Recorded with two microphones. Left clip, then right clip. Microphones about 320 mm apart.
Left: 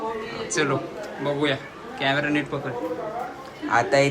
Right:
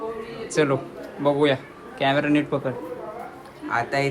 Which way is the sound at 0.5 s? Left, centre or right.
Centre.